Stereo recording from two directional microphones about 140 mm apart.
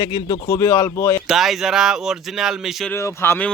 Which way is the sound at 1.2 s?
Centre (ahead or behind).